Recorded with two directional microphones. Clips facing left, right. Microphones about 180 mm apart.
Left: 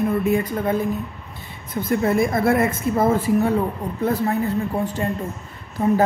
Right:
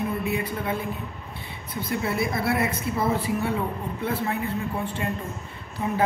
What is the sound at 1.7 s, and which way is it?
A woman's voice, 45° left (ahead or behind).